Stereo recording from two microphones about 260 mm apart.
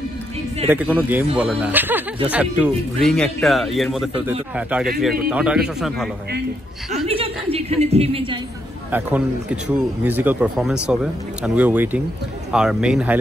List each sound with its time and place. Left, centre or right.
0.7 s speech: centre
7.5 s speech: right
8.9 s speech: centre